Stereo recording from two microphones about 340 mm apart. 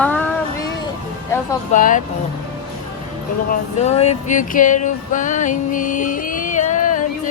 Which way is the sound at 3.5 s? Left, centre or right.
Centre.